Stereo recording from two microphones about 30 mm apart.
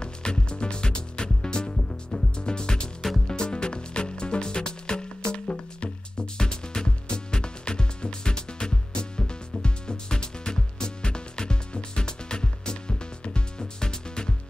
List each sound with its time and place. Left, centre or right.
0.0 s music: left